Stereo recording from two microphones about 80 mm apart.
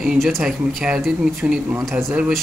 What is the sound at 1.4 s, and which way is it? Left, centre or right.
Speech, right.